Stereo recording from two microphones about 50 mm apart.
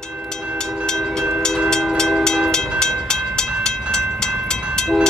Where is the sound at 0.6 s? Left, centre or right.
Centre.